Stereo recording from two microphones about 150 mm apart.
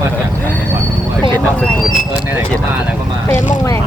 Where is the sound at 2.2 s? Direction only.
15° right (ahead or behind).